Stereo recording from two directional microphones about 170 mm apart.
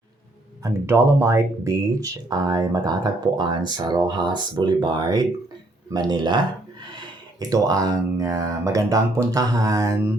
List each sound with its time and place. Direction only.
0.6 s speech: 15° right (ahead or behind)